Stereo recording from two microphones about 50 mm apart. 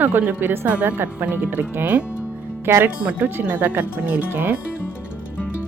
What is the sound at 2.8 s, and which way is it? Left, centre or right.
Speech, right.